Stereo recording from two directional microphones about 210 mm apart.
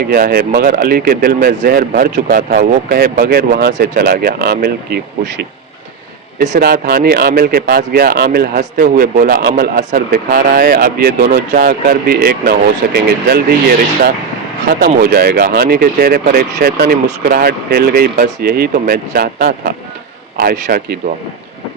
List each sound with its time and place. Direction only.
0.1 s speech: 45° right (ahead or behind)
6.5 s speech: 45° right (ahead or behind)